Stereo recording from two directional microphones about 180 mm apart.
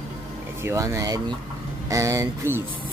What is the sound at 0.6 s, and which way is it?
Speech, 15° right (ahead or behind).